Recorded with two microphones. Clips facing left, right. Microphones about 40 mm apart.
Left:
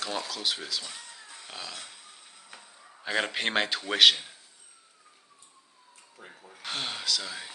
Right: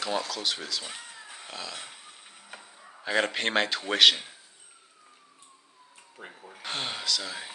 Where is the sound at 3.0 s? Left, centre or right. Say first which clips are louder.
Right 2 dB; centre.